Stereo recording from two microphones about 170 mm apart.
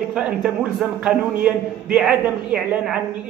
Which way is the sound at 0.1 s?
5° right (ahead or behind).